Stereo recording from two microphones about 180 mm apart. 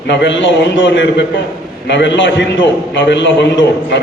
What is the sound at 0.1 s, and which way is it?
A man's voice, 85° left.